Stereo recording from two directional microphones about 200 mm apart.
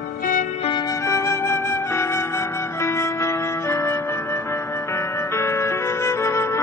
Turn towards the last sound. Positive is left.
turn(degrees=15)  # may be behind; listen again after turning